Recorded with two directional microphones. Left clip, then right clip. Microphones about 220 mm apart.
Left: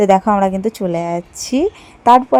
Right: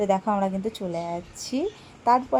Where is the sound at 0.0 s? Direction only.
35° left (ahead or behind).